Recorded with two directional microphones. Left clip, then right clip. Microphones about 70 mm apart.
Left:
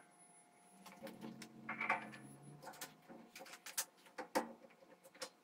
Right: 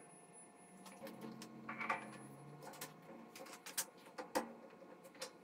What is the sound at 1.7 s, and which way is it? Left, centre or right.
Coin, centre.